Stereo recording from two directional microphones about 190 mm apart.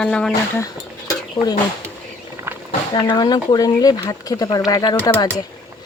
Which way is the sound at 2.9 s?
25° left (ahead or behind).